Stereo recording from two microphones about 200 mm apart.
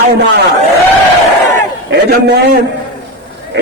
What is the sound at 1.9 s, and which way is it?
Speech, 50° right (ahead or behind).